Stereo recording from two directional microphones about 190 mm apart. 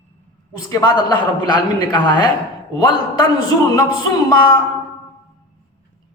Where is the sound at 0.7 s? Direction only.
20° left (ahead or behind).